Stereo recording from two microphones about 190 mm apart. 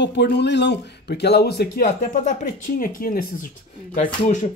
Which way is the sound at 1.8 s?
40° left (ahead or behind).